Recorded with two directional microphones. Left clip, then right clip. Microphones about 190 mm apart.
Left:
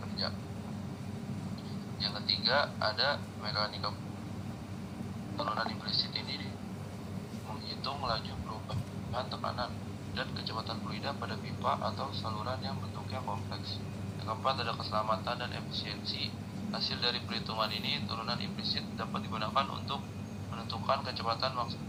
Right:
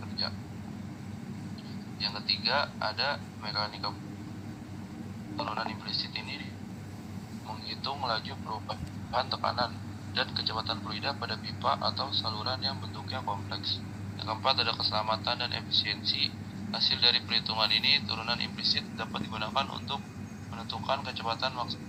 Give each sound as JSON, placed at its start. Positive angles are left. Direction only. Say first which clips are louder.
{"t": 2.0, "sound": "a man's voice", "louder": "right 2 dB", "side_deg": 0}
{"t": 5.4, "sound": "a man's voice", "louder": "even", "side_deg": 0}
{"t": 7.9, "sound": "a man's voice", "louder": "right 3 dB", "side_deg": -10}
{"t": 14.3, "sound": "a man's voice", "louder": "right 5 dB", "side_deg": -15}